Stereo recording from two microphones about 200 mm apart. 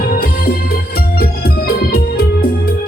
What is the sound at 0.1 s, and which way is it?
Music, 50° left (ahead or behind).